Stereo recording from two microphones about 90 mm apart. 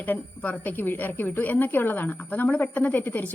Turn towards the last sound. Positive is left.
turn(degrees=20)  # may be behind; listen again after turning